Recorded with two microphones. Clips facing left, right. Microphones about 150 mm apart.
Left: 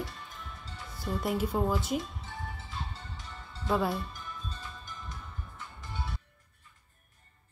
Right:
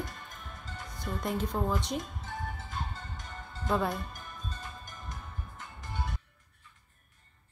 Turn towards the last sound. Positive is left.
turn(degrees=-50)  # may be behind; listen again after turning